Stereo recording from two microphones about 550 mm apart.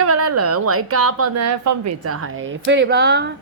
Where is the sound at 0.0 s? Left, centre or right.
Right.